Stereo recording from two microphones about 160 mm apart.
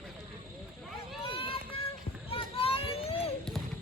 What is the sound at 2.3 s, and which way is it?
Children playing, 35° left (ahead or behind).